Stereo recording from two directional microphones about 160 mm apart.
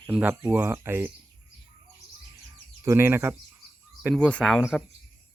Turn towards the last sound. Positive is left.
turn(degrees=0)  # may be behind; listen again after turning